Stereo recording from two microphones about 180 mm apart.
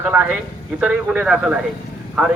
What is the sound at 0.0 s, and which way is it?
Speech, 10° right (ahead or behind).